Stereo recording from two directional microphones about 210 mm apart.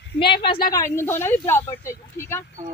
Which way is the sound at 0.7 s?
15° left (ahead or behind).